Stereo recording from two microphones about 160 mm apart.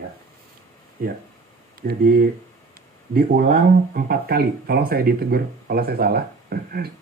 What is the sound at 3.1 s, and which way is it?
Speech, 75° right (ahead or behind).